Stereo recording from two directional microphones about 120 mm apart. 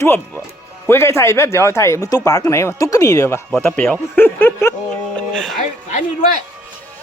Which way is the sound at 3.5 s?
10° left (ahead or behind).